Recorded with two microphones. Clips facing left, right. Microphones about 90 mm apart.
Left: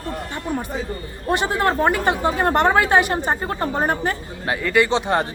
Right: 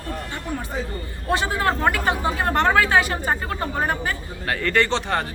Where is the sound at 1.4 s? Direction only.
20° left (ahead or behind).